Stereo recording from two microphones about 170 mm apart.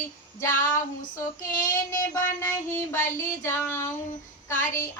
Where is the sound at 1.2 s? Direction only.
20° left (ahead or behind).